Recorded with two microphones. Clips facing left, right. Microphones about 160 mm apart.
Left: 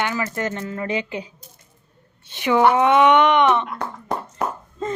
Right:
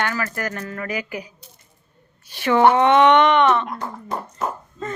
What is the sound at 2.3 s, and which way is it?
A woman's voice, 15° left (ahead or behind).